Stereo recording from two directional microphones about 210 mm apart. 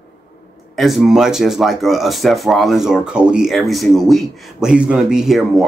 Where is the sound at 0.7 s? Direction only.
Centre (ahead or behind).